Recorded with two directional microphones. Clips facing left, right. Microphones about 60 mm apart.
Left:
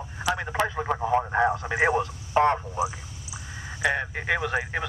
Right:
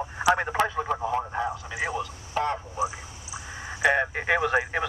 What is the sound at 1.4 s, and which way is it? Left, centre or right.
A man's voice, left.